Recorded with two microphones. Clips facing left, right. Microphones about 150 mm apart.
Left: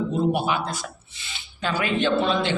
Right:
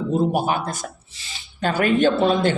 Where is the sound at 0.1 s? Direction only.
40° right (ahead or behind).